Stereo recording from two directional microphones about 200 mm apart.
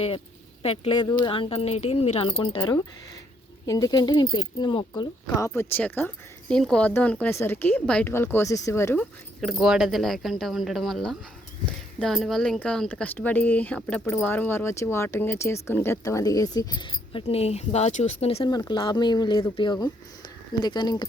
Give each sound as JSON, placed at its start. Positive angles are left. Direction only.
{"t": 0.6, "sound": "a woman's voice", "side_deg": 30}
{"t": 9.4, "sound": "a woman's voice", "side_deg": 0}